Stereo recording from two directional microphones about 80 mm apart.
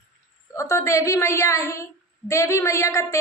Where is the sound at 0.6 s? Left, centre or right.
Left.